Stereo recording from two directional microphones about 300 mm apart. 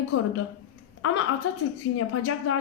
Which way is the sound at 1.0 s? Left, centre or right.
Left.